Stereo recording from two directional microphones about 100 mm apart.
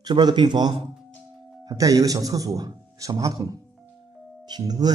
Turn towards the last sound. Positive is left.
turn(degrees=-40)  # may be behind; listen again after turning